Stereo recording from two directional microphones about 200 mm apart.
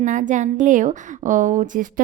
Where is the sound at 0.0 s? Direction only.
40° right (ahead or behind).